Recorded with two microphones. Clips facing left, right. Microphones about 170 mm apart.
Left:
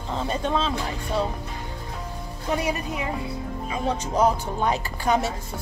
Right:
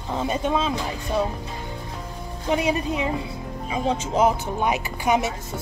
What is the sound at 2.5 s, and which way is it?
Speech, 20° right (ahead or behind).